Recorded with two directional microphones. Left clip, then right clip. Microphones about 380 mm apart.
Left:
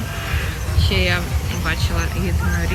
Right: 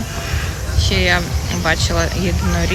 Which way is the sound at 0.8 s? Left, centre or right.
Centre.